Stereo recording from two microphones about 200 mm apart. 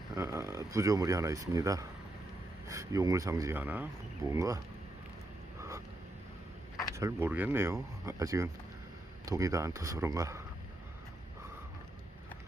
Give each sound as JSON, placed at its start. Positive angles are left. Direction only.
{"t": 0.2, "sound": "speech", "side_deg": -15}
{"t": 5.5, "sound": "a sound", "side_deg": -15}
{"t": 6.9, "sound": "speech", "side_deg": -15}